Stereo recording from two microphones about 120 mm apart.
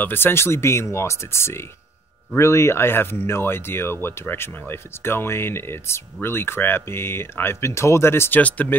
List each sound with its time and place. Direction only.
0.0 s speech: 15° left (ahead or behind)